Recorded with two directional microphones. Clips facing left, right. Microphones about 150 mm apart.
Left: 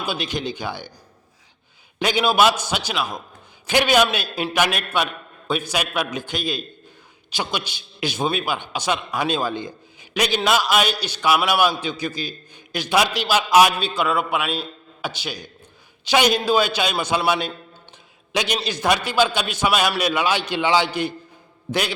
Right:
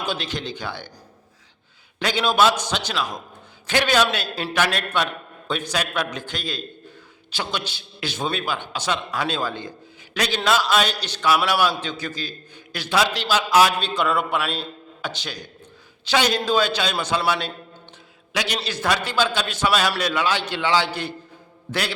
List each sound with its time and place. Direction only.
0.0 s a man's voice: 10° left (ahead or behind)
2.0 s a man's voice: 15° left (ahead or behind)
13.7 s a man's voice: 5° left (ahead or behind)